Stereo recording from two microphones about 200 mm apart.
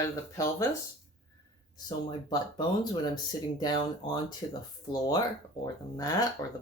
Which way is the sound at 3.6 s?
20° left (ahead or behind).